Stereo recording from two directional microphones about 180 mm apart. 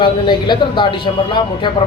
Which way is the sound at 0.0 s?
25° left (ahead or behind).